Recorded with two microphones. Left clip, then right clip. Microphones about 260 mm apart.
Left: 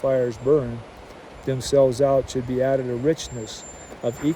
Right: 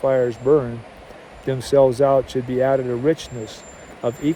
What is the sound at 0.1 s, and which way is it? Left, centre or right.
Speech, centre.